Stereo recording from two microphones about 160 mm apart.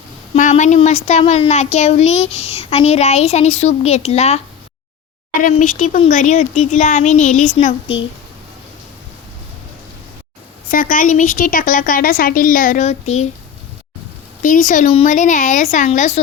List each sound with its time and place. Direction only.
0.3 s a child's voice: 50° left (ahead or behind)
5.4 s a woman's voice: 55° left (ahead or behind)
10.7 s a woman's voice: 60° left (ahead or behind); by 13.2 s 45° left (ahead or behind)
14.4 s a woman's voice: 55° left (ahead or behind)